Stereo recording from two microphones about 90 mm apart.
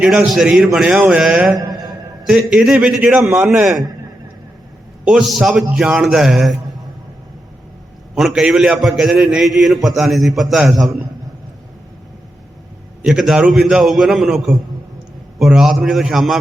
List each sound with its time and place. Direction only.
0.0 s a man's voice: 5° right (ahead or behind)
1.5 s a sound: 45° right (ahead or behind)
2.2 s a man's voice: 5° right (ahead or behind)
5.0 s a man's voice: 5° right (ahead or behind)
8.1 s a man's voice: 5° right (ahead or behind)
13.1 s a man's voice: 5° right (ahead or behind)